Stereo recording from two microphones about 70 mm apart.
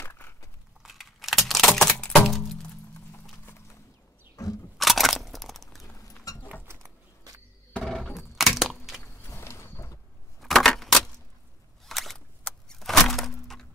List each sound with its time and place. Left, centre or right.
0.0 s a sound: left
0.8 s a sound: centre
1.5 s typing: centre
2.2 s music: centre
4.4 s single-lens reflex camera: left
4.7 s crunch: centre
5.9 s rodents: left
8.2 s crack: centre
9.2 s mechanisms: left
10.4 s keys jangling: centre
11.8 s single-lens reflex camera: centre
12.4 s a sound: centre